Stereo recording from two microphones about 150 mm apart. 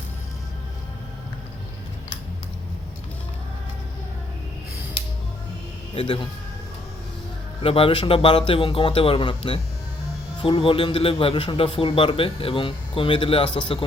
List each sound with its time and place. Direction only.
5.9 s a man's voice: 35° left (ahead or behind)
7.6 s a man's voice: 40° left (ahead or behind)